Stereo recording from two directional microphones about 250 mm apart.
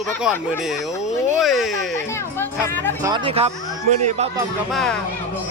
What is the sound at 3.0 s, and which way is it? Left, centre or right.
Speech, centre.